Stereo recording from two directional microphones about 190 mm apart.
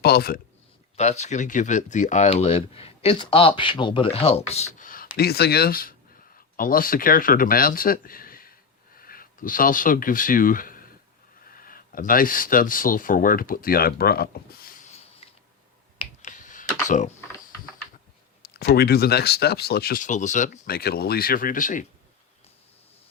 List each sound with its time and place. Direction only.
0.0 s speech: 55° left (ahead or behind)
0.9 s speech: 35° left (ahead or behind); by 14.7 s 55° left (ahead or behind)
15.2 s mechanisms: 30° left (ahead or behind)
16.0 s computer keyboard: 40° left (ahead or behind)
18.5 s speech: 55° left (ahead or behind)